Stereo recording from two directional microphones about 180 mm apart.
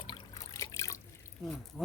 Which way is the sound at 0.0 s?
20° left (ahead or behind).